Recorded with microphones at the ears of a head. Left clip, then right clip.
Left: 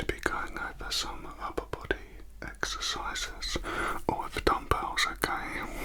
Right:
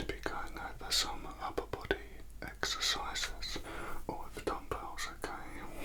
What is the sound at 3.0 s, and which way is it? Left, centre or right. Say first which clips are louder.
Whispering: left 4 dB; left.